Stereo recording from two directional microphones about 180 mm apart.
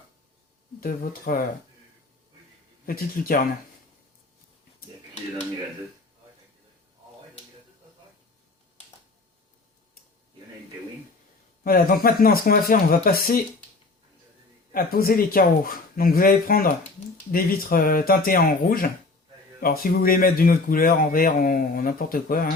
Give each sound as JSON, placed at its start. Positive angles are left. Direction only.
{"t": 0.8, "sound": "speech", "side_deg": 55}
{"t": 2.8, "sound": "speech", "side_deg": 55}
{"t": 11.6, "sound": "speech", "side_deg": 55}
{"t": 14.7, "sound": "speech", "side_deg": 55}